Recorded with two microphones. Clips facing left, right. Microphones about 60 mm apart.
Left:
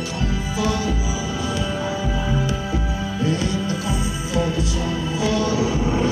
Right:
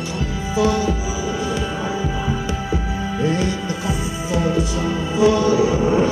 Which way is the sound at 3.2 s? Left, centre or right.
Right.